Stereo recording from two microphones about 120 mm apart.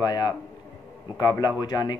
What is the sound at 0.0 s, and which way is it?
Speech, 35° left (ahead or behind).